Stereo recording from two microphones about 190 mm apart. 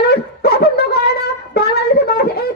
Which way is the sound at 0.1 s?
55° left (ahead or behind).